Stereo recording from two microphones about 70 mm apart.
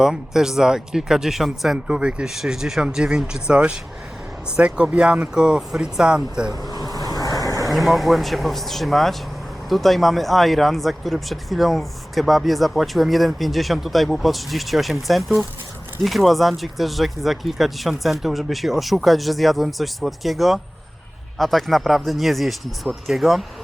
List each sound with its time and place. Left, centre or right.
0.0 s speech: centre
6.8 s vehicle: left
7.7 s speech: centre